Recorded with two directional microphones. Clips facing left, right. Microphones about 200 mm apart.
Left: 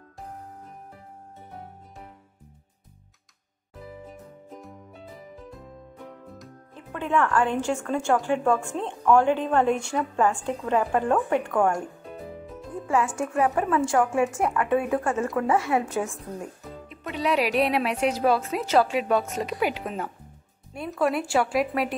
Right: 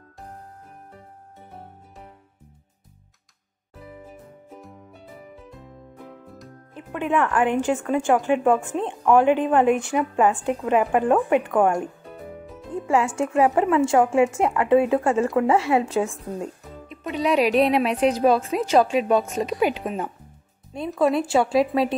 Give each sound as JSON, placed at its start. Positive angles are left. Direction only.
{"t": 4.1, "sound": "music", "side_deg": -5}
{"t": 6.0, "sound": "music", "side_deg": 0}
{"t": 6.7, "sound": "a woman's voice", "side_deg": -15}